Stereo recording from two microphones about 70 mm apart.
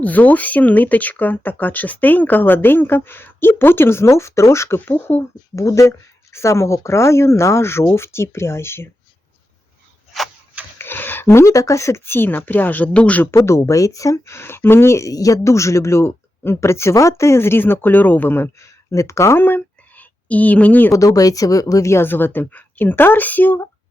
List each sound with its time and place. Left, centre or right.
0.0 s speech: left
10.8 s speech: left
13.3 s speech: left
15.1 s speech: left
18.9 s speech: left
19.4 s a sound: left
20.9 s a woman's voice: left
21.8 s speech: left